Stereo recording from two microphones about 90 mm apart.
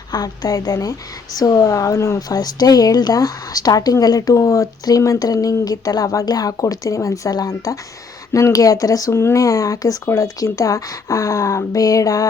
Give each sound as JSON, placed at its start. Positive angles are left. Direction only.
{"t": 0.1, "sound": "a woman's voice", "side_deg": 45}